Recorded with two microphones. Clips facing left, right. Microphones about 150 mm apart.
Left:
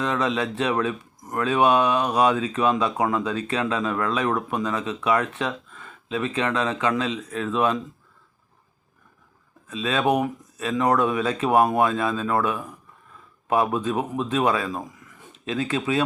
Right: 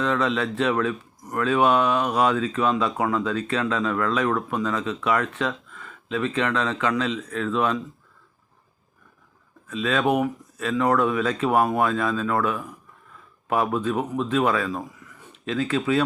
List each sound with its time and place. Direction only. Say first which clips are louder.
0.0 s speech: right 1 dB; 15° left (ahead or behind)
9.8 s speech: even; 20° left (ahead or behind)